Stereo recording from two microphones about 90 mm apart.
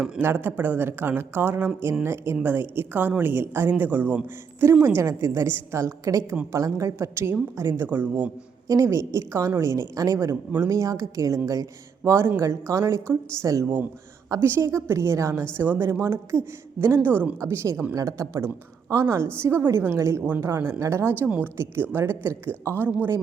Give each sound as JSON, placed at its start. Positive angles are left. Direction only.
{"t": 0.2, "sound": "a woman's voice", "side_deg": -25}
{"t": 8.6, "sound": "a woman's voice", "side_deg": -35}